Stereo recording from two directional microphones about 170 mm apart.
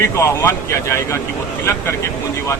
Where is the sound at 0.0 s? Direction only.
15° left (ahead or behind).